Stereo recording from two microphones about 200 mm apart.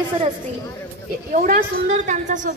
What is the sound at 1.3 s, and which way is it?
A woman's voice, 40° right (ahead or behind).